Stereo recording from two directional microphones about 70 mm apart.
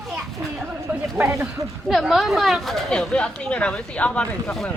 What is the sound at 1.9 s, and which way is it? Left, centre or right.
Speech, centre.